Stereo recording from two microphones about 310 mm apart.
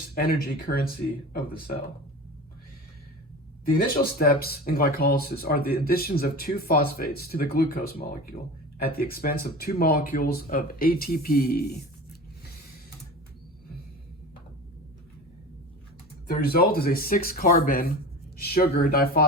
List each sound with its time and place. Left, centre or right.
0.1 s speech: left
3.9 s speech: left
16.2 s speech: left